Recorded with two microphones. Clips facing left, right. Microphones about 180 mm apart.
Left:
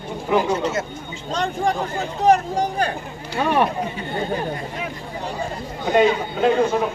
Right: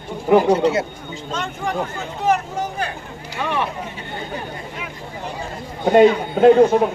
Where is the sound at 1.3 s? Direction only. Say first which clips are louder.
Left 4 dB; 35° left (ahead or behind).